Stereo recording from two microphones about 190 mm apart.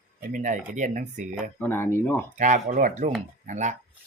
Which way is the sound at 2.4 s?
40° right (ahead or behind).